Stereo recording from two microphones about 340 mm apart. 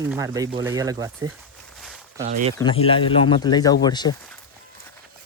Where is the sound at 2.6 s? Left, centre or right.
Centre.